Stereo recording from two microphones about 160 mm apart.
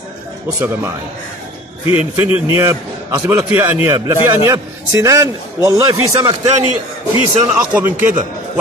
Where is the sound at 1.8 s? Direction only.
35° left (ahead or behind).